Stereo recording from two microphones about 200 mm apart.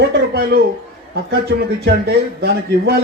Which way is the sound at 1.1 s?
55° right (ahead or behind).